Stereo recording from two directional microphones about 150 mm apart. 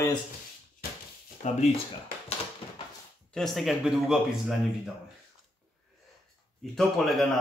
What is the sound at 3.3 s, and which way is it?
Speech, centre (ahead or behind).